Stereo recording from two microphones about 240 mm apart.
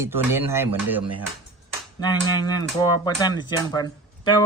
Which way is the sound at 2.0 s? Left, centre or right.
Centre.